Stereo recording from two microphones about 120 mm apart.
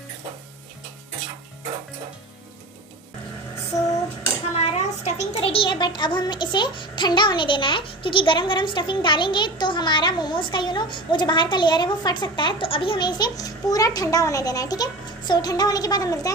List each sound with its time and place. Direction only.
4.6 s a child's voice: 70° left (ahead or behind); by 16.3 s 30° left (ahead or behind)